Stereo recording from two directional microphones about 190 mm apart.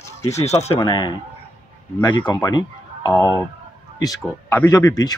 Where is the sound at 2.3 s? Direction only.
20° left (ahead or behind).